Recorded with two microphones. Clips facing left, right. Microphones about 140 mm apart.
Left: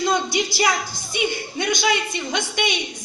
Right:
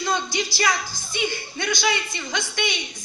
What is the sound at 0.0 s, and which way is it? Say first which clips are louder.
A woman's voice: left 4 dB; 15° left (ahead or behind).